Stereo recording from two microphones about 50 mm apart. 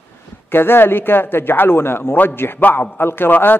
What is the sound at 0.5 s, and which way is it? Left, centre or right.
Speech, left.